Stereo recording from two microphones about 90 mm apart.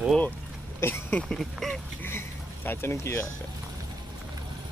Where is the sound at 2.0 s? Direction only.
25° left (ahead or behind).